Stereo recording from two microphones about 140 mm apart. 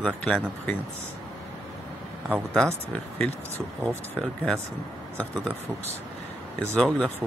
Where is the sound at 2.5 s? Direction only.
5° left (ahead or behind).